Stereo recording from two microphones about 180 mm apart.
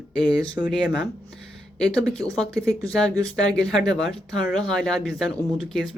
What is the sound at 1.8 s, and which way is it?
Speech, 5° left (ahead or behind).